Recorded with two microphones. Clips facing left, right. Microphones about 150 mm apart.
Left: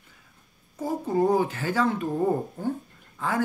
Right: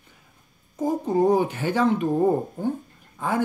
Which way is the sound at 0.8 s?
20° right (ahead or behind).